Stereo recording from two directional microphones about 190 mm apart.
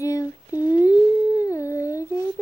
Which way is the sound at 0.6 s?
20° left (ahead or behind).